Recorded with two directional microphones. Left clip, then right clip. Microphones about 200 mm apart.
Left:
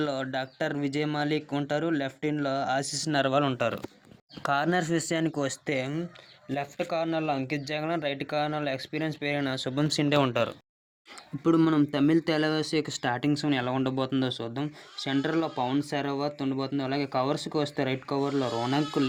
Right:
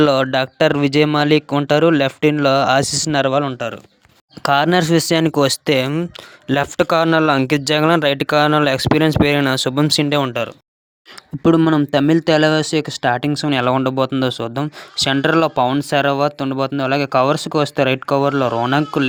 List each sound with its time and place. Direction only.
0.0 s speech: 40° right (ahead or behind)
3.4 s speech: 15° right (ahead or behind)
4.4 s speech: 25° right (ahead or behind)
11.4 s speech: 35° right (ahead or behind)